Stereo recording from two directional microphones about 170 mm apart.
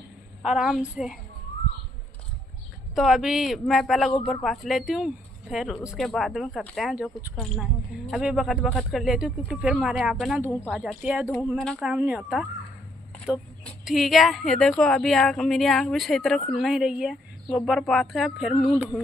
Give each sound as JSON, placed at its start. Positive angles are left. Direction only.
{"t": 0.4, "sound": "speech", "side_deg": -5}
{"t": 2.9, "sound": "speech", "side_deg": 0}
{"t": 8.1, "sound": "speech", "side_deg": 0}
{"t": 10.4, "sound": "speech", "side_deg": 15}
{"t": 10.7, "sound": "speech", "side_deg": 0}